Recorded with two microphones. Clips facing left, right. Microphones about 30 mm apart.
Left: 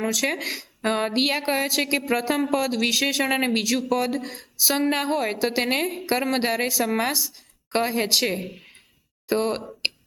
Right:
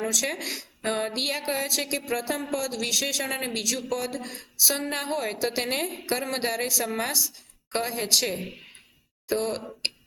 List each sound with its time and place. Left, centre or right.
0.0 s speech: centre